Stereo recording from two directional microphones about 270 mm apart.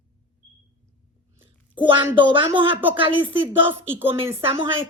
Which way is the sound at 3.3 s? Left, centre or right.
Centre.